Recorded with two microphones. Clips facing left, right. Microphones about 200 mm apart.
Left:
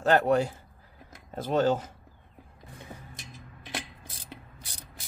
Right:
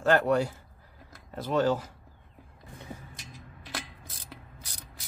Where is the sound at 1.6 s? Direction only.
20° left (ahead or behind).